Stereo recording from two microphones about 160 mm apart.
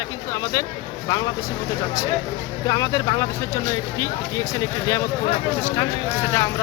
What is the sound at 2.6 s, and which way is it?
Speech, 25° left (ahead or behind).